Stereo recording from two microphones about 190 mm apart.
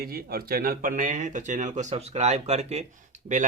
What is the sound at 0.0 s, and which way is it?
Speech, 55° right (ahead or behind).